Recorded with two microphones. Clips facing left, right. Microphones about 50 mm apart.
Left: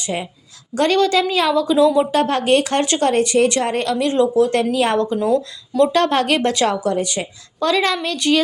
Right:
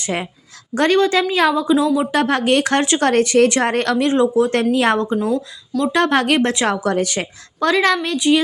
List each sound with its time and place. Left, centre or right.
0.0 s a woman's voice: right
0.7 s a woman's voice: right
1.6 s a woman's voice: centre
2.1 s a woman's voice: right
3.9 s speech: right
4.7 s a woman's voice: right
4.9 s a woman's voice: centre
5.9 s a woman's voice: right
6.7 s a woman's voice: right
7.6 s a woman's voice: right
8.1 s a woman's voice: centre